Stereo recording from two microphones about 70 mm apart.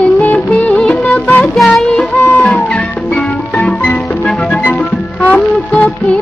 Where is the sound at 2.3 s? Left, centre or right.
Centre.